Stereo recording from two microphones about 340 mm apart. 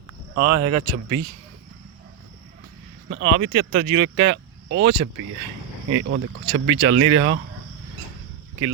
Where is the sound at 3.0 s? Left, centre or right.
Right.